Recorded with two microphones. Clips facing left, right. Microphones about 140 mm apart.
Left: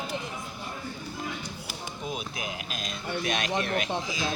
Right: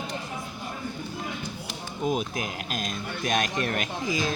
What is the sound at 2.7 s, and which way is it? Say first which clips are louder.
Speech: even; 45° right (ahead or behind).